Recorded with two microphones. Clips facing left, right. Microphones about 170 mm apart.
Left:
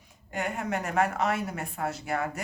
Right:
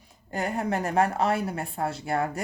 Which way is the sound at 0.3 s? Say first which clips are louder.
Right 3 dB; 35° right (ahead or behind).